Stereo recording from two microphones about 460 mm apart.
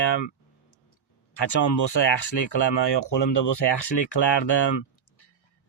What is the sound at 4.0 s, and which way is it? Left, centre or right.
Speech, left.